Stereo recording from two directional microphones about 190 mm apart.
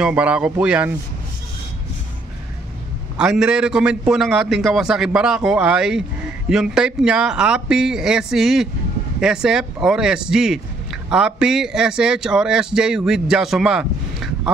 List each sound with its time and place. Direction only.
0.0 s speech: 5° right (ahead or behind)
3.2 s speech: 5° right (ahead or behind)